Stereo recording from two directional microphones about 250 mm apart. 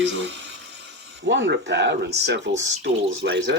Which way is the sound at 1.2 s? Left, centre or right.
Right.